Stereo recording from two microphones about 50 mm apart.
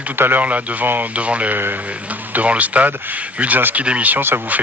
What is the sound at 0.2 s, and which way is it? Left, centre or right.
A man's voice, right.